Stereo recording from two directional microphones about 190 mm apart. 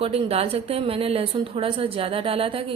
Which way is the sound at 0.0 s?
30° right (ahead or behind).